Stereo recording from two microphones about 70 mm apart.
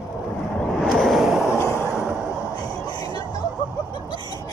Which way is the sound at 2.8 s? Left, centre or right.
Left.